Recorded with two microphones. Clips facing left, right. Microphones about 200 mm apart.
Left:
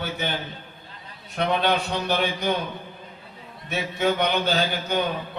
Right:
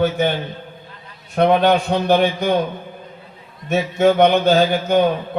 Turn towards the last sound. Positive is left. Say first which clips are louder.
# right 9 dB
turn(degrees=-50)  # may be behind; listen again after turning